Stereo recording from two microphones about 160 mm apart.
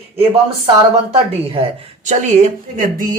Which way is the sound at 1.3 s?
40° right (ahead or behind).